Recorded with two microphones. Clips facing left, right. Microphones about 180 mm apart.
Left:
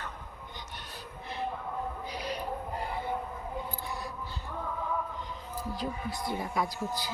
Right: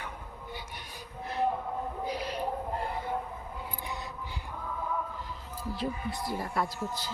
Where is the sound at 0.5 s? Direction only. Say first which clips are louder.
Right 1 dB; 10° right (ahead or behind).